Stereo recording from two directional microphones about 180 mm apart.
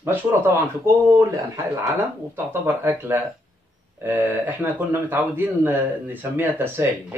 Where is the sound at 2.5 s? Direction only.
10° right (ahead or behind).